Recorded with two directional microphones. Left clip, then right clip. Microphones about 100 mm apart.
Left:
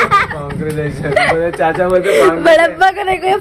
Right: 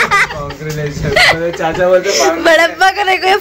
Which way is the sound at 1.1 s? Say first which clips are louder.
Right 3 dB; 5° right (ahead or behind).